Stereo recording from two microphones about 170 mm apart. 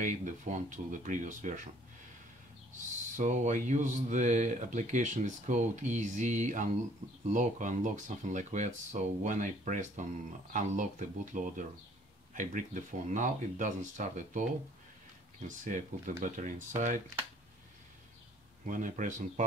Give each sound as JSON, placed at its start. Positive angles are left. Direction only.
{"t": 0.0, "sound": "speech", "side_deg": -45}
{"t": 3.2, "sound": "speech", "side_deg": -45}
{"t": 15.4, "sound": "speech", "side_deg": -50}
{"t": 18.7, "sound": "speech", "side_deg": -50}